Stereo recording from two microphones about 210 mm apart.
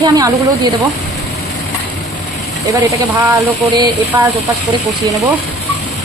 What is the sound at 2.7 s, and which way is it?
Speech, 15° right (ahead or behind).